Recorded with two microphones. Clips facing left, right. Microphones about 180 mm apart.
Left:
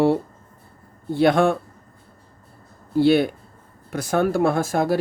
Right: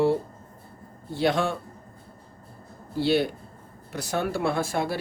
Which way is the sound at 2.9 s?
55° left (ahead or behind).